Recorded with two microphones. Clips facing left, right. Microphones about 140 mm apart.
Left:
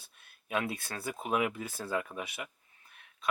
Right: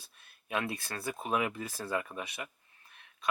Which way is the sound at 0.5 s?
Centre (ahead or behind).